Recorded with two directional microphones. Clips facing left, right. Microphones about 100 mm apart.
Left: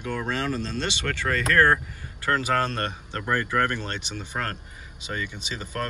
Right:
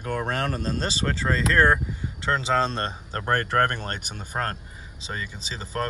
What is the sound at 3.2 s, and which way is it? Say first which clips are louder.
Speech: right 2 dB; 60° right (ahead or behind).